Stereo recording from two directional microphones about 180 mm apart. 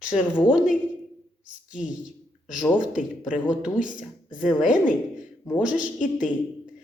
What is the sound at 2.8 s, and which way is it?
Speech, 45° left (ahead or behind).